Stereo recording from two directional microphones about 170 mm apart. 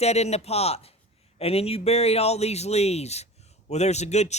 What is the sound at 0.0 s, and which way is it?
A man's voice, 40° left (ahead or behind).